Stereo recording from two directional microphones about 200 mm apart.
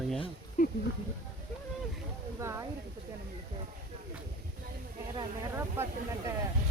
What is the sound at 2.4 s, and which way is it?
Speech, 15° right (ahead or behind).